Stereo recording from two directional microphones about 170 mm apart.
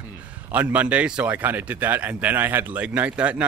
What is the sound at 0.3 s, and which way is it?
Speech, 10° right (ahead or behind).